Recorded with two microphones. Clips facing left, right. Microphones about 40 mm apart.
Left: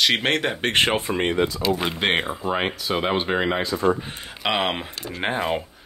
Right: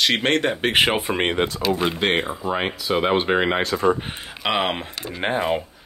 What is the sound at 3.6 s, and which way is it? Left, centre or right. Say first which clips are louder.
Speech: right 2 dB; right.